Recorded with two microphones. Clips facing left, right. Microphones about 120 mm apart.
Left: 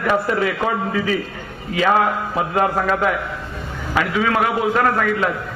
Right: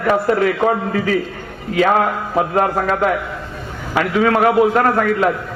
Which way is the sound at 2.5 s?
40° right (ahead or behind).